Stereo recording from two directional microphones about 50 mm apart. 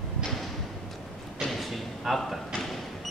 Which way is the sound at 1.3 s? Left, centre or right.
Centre.